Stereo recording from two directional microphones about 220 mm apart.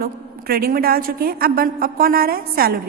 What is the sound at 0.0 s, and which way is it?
A woman's voice, 45° right (ahead or behind).